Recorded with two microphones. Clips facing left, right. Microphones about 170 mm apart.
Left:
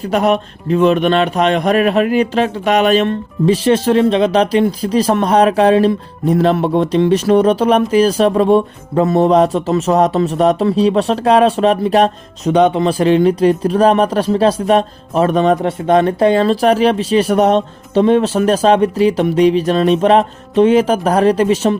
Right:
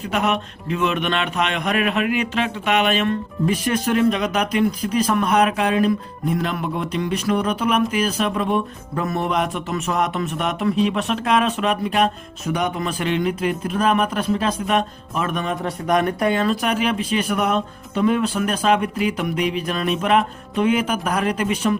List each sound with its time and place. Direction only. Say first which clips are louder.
0.0 s a man's voice: left 7 dB; 35° left (ahead or behind)